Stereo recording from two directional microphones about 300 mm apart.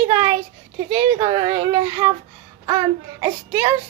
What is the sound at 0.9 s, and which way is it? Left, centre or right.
A woman's voice, centre.